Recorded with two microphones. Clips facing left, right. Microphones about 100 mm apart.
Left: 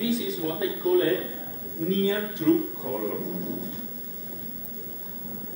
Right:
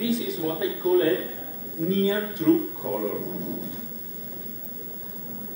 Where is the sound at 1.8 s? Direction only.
30° right (ahead or behind).